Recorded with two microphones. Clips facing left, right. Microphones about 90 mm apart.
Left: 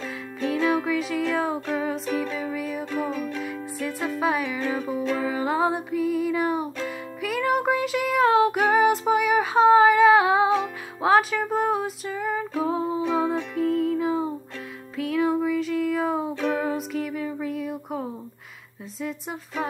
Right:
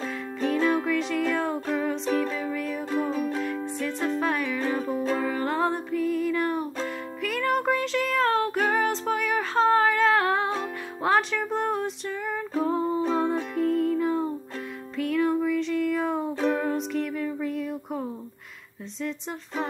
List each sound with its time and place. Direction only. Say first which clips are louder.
0.4 s music: left 1 dB; centre (ahead or behind)
3.1 s music: right 2 dB; 35° right (ahead or behind)
4.2 s music: left 2 dB; 5° left (ahead or behind)